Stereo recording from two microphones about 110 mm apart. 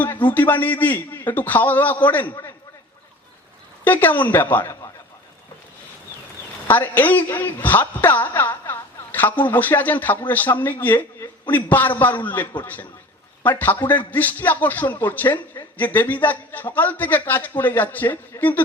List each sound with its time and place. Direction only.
0.3 s a woman's voice: 15° left (ahead or behind)
3.8 s a woman's voice: 15° left (ahead or behind)
6.7 s a woman's voice: 15° left (ahead or behind)